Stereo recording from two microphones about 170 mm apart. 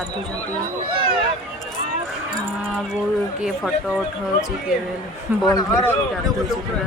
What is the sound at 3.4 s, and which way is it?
Speech, 5° right (ahead or behind).